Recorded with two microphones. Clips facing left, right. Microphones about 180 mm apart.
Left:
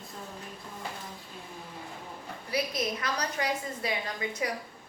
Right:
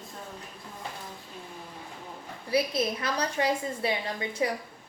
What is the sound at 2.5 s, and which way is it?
A woman's voice, 25° right (ahead or behind).